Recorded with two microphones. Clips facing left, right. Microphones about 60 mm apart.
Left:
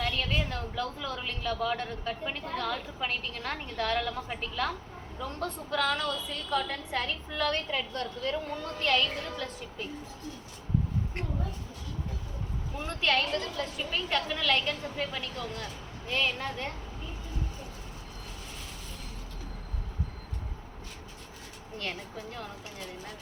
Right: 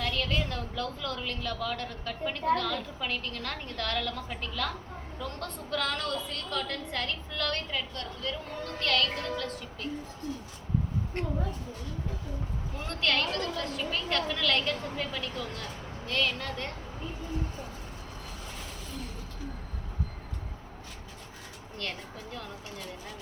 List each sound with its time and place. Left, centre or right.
0.0 s a woman's voice: centre
5.2 s a woman's voice: centre; by 8.4 s left
8.8 s a woman's voice: centre
12.8 s a woman's voice: centre
16.0 s a woman's voice: centre